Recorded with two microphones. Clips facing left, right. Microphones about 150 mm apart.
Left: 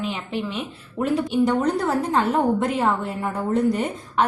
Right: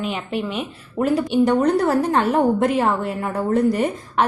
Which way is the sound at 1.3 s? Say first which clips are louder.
Right 4 dB; 70° right (ahead or behind).